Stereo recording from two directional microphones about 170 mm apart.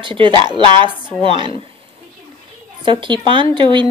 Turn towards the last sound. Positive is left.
turn(degrees=-30)  # may be behind; listen again after turning